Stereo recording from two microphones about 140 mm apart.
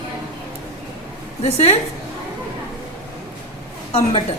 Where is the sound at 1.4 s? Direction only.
50° left (ahead or behind).